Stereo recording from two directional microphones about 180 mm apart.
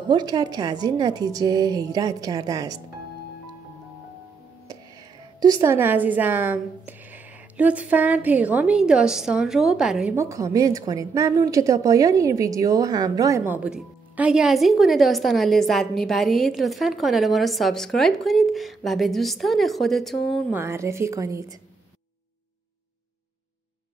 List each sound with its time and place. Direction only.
0.1 s a woman's voice: 20° right (ahead or behind)
5.4 s a woman's voice: 20° right (ahead or behind)
10.1 s a woman's voice: 15° right (ahead or behind); by 20.5 s centre (ahead or behind)
20.5 s a woman's voice: 15° right (ahead or behind)